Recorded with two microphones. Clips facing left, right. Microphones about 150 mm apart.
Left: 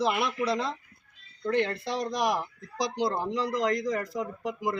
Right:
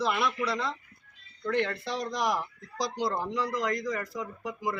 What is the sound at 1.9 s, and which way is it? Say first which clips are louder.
Speech: left 2 dB; 15° left (ahead or behind).